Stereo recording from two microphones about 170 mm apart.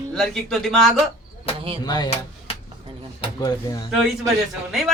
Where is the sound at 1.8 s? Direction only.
25° left (ahead or behind).